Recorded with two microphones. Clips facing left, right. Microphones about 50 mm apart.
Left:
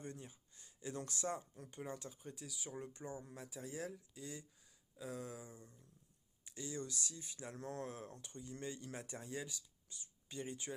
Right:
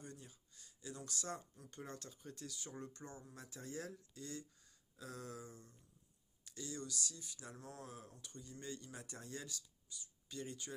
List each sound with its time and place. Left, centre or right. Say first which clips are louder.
0.0 s a sound: left 4 dB; left
1.0 s speech: left 3 dB; left
1.7 s speech: left 4 dB; centre; by 7.5 s left
7.5 s speech: left 8 dB; left
8.2 s speech: left 4 dB; left
9.9 s speech: left 1 dB; left